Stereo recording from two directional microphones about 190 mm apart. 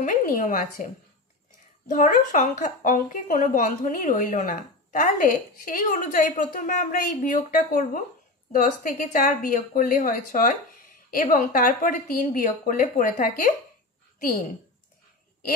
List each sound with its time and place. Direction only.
0.0 s a woman's voice: 45° left (ahead or behind)
1.9 s a woman's voice: 45° left (ahead or behind)